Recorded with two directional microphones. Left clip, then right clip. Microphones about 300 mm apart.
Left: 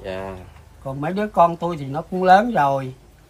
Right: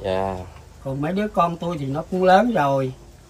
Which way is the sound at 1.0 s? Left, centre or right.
Centre.